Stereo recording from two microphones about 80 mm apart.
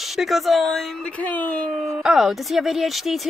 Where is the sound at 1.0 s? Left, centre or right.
Centre.